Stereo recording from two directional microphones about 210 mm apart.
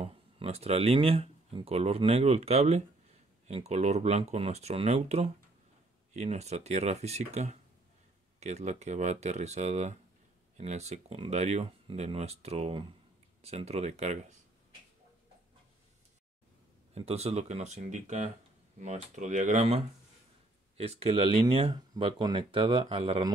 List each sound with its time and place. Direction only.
0.0 s speech: 30° right (ahead or behind)
16.9 s speech: 30° right (ahead or behind)